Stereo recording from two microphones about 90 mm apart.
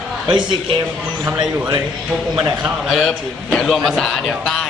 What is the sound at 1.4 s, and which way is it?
Speech, 60° right (ahead or behind).